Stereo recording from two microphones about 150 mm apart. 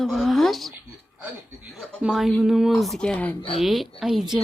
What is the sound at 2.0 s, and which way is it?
A child's voice, centre (ahead or behind).